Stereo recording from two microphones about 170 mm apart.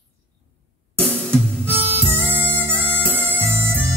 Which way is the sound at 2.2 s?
10° left (ahead or behind).